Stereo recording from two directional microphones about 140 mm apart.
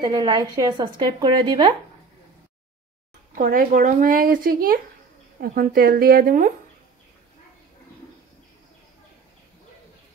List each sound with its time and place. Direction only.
0.0 s speech: 30° right (ahead or behind)
3.3 s speech: 85° right